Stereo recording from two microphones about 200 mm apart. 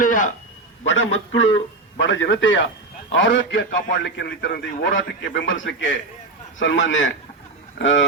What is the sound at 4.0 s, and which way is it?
A man's voice, 60° left (ahead or behind).